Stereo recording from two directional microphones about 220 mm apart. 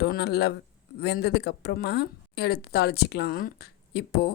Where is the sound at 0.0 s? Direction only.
45° left (ahead or behind).